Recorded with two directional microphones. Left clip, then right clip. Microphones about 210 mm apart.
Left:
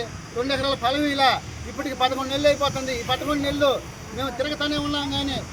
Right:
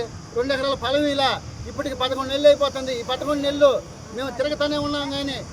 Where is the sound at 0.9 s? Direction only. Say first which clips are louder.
Right 2 dB; 30° right (ahead or behind).